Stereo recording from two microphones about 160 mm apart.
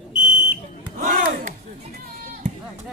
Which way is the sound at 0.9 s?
60° right (ahead or behind).